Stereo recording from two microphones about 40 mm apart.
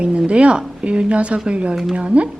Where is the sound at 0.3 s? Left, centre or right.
Right.